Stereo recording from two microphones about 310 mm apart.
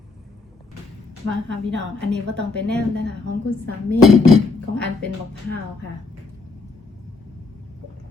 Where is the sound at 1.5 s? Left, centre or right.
Right.